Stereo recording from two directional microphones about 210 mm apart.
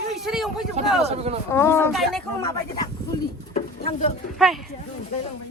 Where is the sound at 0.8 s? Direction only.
30° right (ahead or behind).